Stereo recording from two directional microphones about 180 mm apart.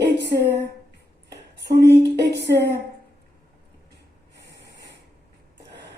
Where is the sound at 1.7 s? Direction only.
65° right (ahead or behind).